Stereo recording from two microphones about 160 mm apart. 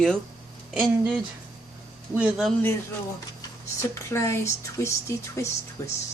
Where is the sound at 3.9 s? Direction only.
15° left (ahead or behind).